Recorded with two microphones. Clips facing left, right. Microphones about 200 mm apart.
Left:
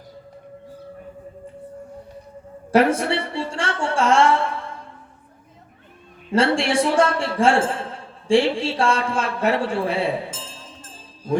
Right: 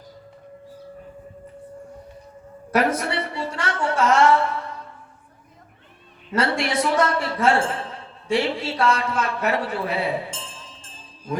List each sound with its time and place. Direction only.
2.7 s a woman's voice: 30° left (ahead or behind)
6.3 s a man's voice: 30° left (ahead or behind)